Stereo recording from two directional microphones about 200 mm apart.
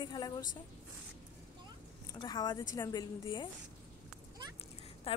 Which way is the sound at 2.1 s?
20° left (ahead or behind).